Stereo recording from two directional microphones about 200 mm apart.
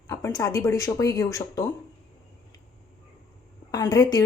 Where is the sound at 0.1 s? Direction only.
15° left (ahead or behind).